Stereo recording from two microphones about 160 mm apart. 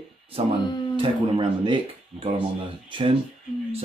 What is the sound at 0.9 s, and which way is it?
Speech, 35° right (ahead or behind).